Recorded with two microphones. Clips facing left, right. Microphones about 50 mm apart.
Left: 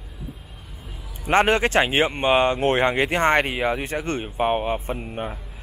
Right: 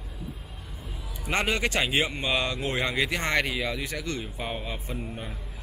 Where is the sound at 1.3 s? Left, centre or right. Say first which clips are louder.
Left 8 dB; left.